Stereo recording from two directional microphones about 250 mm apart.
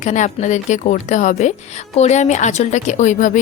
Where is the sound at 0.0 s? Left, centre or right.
Left.